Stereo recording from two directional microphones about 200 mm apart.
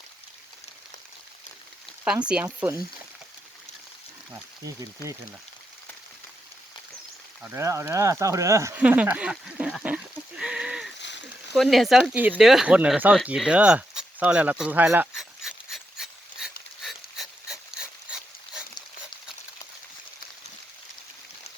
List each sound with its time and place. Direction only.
2.2 s speech: 5° right (ahead or behind)
7.4 s speech: 15° right (ahead or behind)
11.0 s frying: 60° left (ahead or behind)
11.5 s speech: centre (ahead or behind)
16.8 s dog: centre (ahead or behind)